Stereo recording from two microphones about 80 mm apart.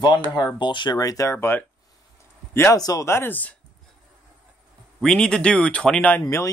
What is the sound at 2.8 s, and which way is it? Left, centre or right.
Speech, left.